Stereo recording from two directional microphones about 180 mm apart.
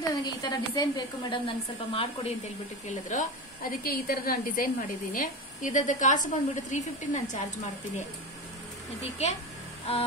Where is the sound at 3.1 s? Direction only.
50° left (ahead or behind).